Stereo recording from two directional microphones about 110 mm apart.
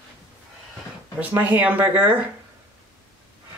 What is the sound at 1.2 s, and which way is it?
Speech, 15° right (ahead or behind).